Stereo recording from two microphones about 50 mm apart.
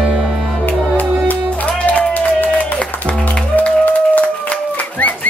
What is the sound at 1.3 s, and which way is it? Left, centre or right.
Music, left.